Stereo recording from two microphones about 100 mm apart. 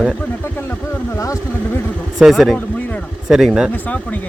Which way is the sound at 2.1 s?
5° right (ahead or behind).